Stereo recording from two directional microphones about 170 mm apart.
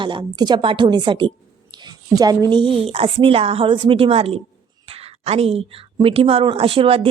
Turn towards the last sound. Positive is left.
turn(degrees=-35)  # may be behind; listen again after turning